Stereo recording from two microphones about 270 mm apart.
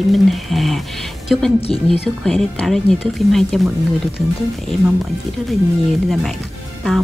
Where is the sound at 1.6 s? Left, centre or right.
Left.